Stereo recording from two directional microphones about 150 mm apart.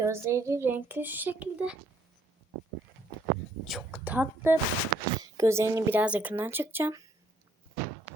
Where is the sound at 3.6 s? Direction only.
Centre (ahead or behind).